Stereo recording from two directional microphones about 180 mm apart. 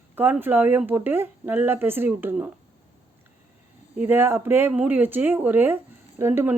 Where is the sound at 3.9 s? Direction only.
10° right (ahead or behind).